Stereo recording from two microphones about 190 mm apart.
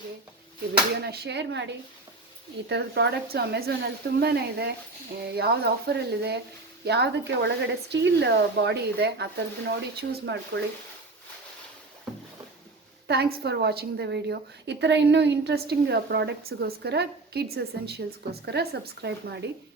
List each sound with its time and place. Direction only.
1.0 s a woman's voice: 60° right (ahead or behind)
12.1 s rowboat: centre (ahead or behind)
13.1 s a woman's voice: 55° right (ahead or behind)